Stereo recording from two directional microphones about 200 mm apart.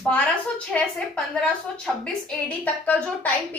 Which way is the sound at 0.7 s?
5° left (ahead or behind).